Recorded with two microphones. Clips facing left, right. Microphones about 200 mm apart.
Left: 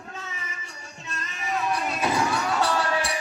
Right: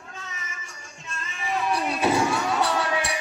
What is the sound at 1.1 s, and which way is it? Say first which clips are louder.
Music: even; 40° left (ahead or behind).